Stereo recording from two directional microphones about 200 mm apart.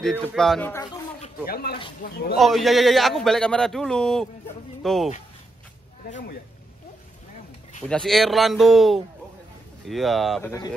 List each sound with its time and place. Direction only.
0.0 s speech: 5° right (ahead or behind)
0.4 s speech: 5° left (ahead or behind)
1.5 s speech: 50° left (ahead or behind)
2.3 s speech: centre (ahead or behind)
6.0 s speech: 40° left (ahead or behind)
7.9 s speech: centre (ahead or behind)
10.4 s speech: 15° left (ahead or behind)